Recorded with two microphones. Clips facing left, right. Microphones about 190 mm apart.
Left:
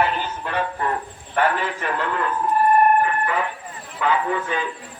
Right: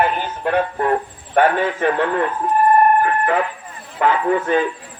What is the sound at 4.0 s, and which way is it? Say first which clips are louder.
Speech: right 5 dB; 50° right (ahead or behind).